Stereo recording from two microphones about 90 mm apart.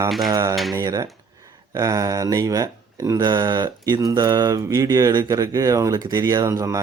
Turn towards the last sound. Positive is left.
turn(degrees=-35)  # may be behind; listen again after turning